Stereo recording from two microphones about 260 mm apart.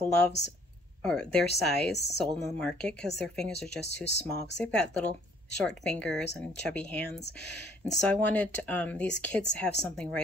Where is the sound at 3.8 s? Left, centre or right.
Left.